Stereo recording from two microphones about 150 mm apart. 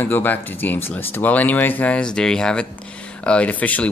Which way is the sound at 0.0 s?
10° left (ahead or behind).